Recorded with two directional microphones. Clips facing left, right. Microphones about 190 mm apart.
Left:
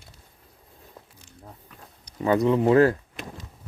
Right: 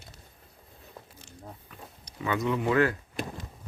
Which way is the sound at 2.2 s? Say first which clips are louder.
Left 8 dB; 35° left (ahead or behind).